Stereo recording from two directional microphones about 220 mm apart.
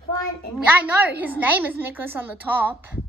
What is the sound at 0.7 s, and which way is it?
A woman's voice, 5° right (ahead or behind).